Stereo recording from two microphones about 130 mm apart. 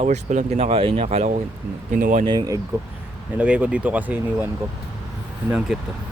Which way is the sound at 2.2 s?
35° right (ahead or behind).